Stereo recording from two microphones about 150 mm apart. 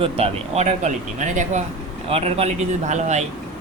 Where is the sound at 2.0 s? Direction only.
40° right (ahead or behind).